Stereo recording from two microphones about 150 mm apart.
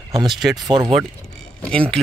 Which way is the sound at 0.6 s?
25° right (ahead or behind).